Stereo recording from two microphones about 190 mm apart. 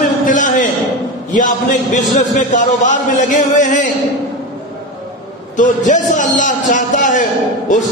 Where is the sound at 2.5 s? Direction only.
40° left (ahead or behind).